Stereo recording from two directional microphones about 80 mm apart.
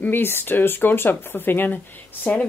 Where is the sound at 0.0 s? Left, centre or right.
Left.